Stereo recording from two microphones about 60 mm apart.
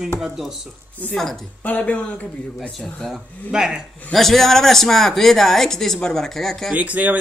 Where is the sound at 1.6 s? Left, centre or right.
Left.